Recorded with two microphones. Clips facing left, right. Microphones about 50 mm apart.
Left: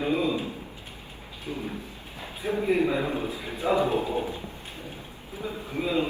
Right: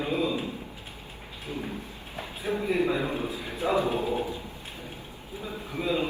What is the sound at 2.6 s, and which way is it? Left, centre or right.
Speech, left.